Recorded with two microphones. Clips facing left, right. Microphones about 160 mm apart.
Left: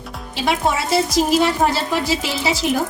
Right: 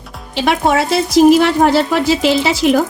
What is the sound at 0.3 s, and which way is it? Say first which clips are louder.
A woman's voice: right 6 dB; 70° right (ahead or behind).